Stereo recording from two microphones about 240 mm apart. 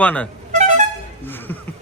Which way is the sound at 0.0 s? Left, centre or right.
Centre.